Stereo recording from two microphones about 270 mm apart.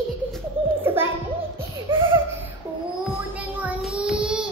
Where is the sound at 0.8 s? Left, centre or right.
Centre.